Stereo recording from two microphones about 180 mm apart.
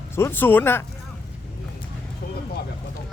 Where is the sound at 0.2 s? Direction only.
10° left (ahead or behind).